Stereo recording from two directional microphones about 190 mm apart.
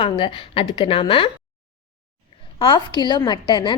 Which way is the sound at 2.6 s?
25° left (ahead or behind).